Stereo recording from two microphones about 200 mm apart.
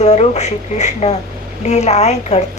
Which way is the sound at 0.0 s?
35° left (ahead or behind).